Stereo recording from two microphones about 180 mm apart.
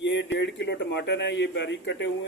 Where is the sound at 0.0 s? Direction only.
80° left.